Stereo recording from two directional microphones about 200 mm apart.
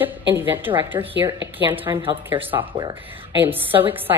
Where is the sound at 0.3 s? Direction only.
10° right (ahead or behind).